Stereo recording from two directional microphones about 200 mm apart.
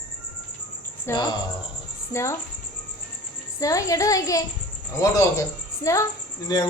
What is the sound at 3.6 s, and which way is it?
A woman's voice, 15° left (ahead or behind).